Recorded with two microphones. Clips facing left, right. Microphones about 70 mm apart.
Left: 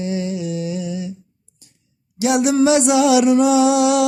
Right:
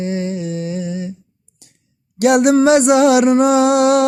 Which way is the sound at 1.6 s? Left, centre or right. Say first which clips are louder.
Right 3 dB; right.